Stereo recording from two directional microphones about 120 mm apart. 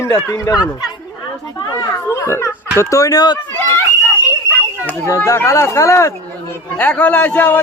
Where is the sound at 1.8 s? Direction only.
25° left (ahead or behind).